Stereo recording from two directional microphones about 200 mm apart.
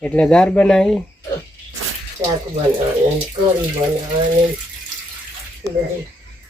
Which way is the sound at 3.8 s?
20° right (ahead or behind).